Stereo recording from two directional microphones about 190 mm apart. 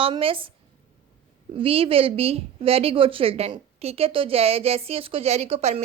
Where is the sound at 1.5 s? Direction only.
30° right (ahead or behind).